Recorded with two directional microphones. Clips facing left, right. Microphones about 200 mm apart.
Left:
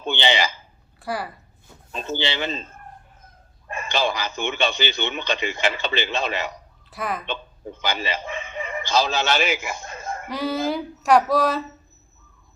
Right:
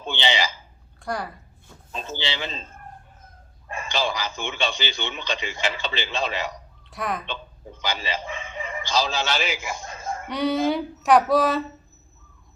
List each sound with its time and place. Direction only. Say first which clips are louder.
0.0 s a sound: left 3 dB; 55° left (ahead or behind)
0.9 s a woman's voice: left 1 dB; 5° left (ahead or behind)
1.9 s a man's voice: left 4 dB; 60° left (ahead or behind)
3.7 s a man's voice: left 2 dB; 60° left (ahead or behind)
6.9 s speech: even; centre (ahead or behind)
7.8 s speech: left 2 dB; 55° left (ahead or behind)
10.2 s speech: right 2 dB; centre (ahead or behind)